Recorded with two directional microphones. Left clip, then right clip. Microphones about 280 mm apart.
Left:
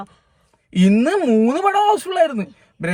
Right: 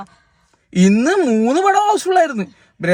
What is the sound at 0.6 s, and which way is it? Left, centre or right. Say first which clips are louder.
Speech: right 2 dB; centre.